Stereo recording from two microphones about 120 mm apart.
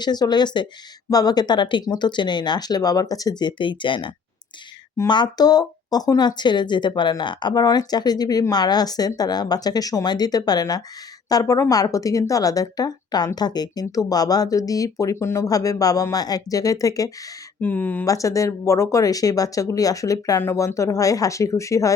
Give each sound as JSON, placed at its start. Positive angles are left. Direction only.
{"t": 0.0, "sound": "speech", "side_deg": 35}
{"t": 17.6, "sound": "speech", "side_deg": 15}
{"t": 18.0, "sound": "speech", "side_deg": 30}